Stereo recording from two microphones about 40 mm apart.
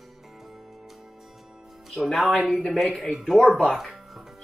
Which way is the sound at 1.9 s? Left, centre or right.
Centre.